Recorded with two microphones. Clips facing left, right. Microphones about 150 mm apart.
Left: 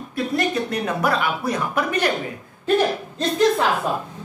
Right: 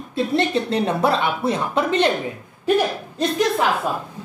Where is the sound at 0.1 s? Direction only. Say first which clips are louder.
Right 3 dB; 25° right (ahead or behind).